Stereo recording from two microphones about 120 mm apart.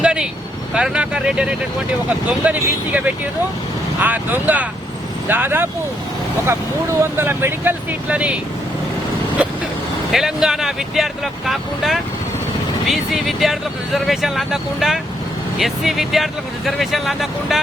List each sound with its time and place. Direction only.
0.0 s vehicle: 5° right (ahead or behind)
0.7 s speech: 10° right (ahead or behind)
7.0 s speech: 20° right (ahead or behind)
10.1 s speech: 5° right (ahead or behind)